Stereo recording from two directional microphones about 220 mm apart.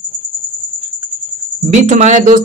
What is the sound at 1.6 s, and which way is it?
Speech, 30° right (ahead or behind).